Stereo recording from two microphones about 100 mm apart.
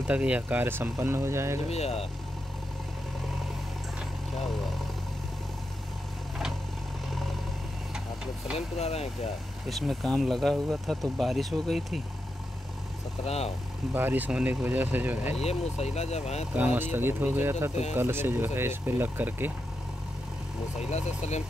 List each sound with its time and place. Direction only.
0.0 s speech: 10° right (ahead or behind); by 1.6 s 25° right (ahead or behind)
1.7 s speech: 90° left
7.1 s vehicle: centre (ahead or behind)
8.5 s speech: 90° left
9.7 s speech: centre (ahead or behind)
13.2 s speech: 90° left
13.9 s speech: 20° right (ahead or behind)
15.4 s speech: 90° left
16.5 s speech: 20° right (ahead or behind)